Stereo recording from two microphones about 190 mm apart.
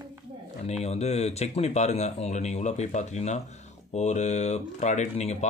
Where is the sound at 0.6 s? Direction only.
35° left (ahead or behind).